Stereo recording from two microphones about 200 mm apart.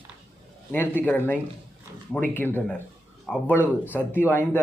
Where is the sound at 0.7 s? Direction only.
10° left (ahead or behind).